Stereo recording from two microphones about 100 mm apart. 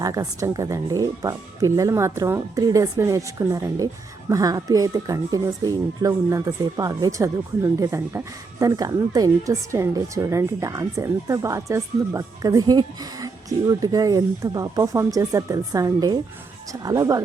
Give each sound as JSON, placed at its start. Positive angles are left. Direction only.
{"t": 0.0, "sound": "speech", "side_deg": -35}